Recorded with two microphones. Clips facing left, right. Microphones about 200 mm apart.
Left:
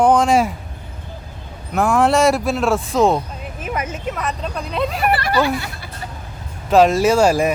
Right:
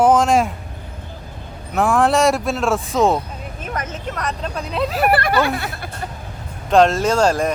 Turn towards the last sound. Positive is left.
turn(degrees=10)  # may be behind; listen again after turning